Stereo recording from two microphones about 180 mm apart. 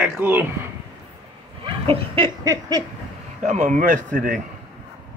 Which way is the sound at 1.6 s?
30° right (ahead or behind).